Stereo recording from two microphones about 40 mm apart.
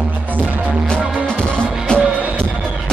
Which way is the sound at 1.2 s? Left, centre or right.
Left.